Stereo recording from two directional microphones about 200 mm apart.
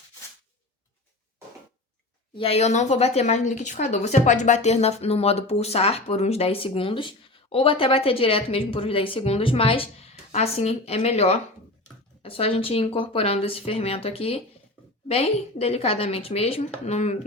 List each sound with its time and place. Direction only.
2.4 s a woman's voice: 30° left (ahead or behind)